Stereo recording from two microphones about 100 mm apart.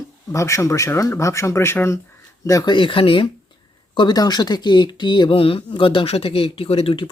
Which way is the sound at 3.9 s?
45° left (ahead or behind).